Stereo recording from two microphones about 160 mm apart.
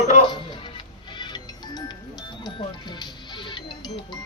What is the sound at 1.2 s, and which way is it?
Music, 30° left (ahead or behind).